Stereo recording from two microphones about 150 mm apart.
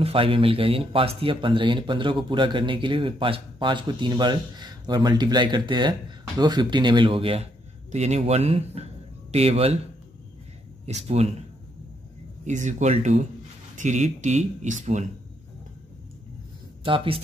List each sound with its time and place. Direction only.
0.0 s speech: 40° right (ahead or behind)
10.9 s speech: 45° right (ahead or behind)
12.4 s speech: 50° right (ahead or behind)
16.8 s speech: 35° right (ahead or behind)